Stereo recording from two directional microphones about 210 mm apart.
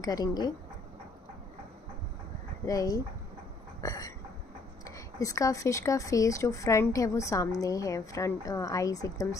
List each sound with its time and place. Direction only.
0.0 s speech: 20° left (ahead or behind)
2.6 s speech: 15° left (ahead or behind)